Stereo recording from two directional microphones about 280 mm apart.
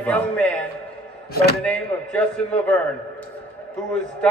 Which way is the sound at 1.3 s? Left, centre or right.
Left.